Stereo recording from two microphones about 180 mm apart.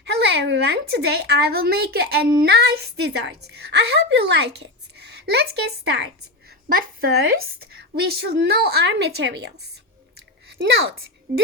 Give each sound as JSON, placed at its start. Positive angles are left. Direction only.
{"t": 0.0, "sound": "a woman's voice", "side_deg": -70}
{"t": 6.7, "sound": "a woman's voice", "side_deg": -55}